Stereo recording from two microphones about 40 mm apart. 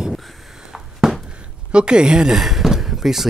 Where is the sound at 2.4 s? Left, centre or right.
Centre.